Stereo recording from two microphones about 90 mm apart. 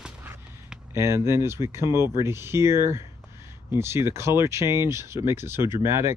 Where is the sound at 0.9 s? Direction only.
30° right (ahead or behind).